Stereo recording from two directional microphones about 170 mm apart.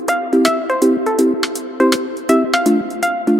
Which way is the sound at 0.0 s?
Centre (ahead or behind).